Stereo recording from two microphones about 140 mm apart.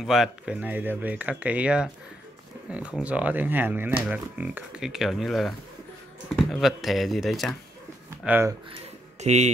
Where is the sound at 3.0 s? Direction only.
10° right (ahead or behind).